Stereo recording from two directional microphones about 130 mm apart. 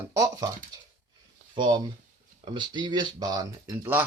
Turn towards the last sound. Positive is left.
turn(degrees=-30)  # may be behind; listen again after turning